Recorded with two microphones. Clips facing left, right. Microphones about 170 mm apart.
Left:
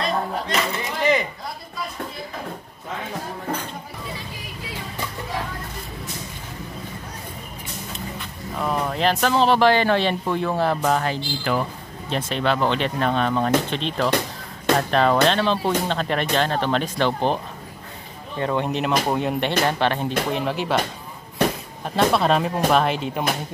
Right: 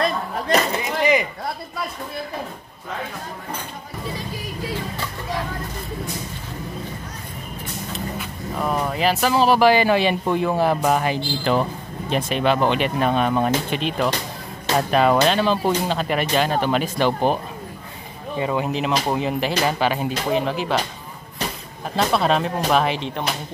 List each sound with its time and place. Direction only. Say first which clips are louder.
0.0 s a sound: right 1 dB; 40° right (ahead or behind)
7.9 s speech: right 5 dB; 5° right (ahead or behind)
11.5 s speech: right 3 dB; 25° right (ahead or behind)
12.1 s speech: right 3 dB; 15° right (ahead or behind)
18.4 s speech: even; 5° right (ahead or behind)
21.9 s speech: left 1 dB; centre (ahead or behind)